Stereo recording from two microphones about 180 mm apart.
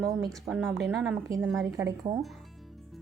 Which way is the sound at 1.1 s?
15° right (ahead or behind).